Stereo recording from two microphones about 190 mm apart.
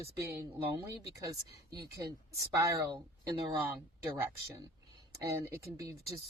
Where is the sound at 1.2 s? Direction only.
20° right (ahead or behind).